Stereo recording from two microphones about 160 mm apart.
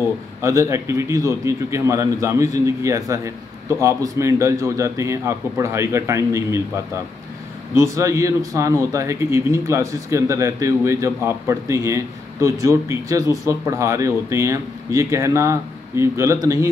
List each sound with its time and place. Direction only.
0.4 s speech: 20° right (ahead or behind)
7.7 s speech: 20° right (ahead or behind)